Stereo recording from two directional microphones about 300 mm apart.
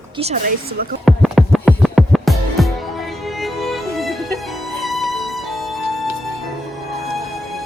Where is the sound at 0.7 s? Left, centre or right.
Right.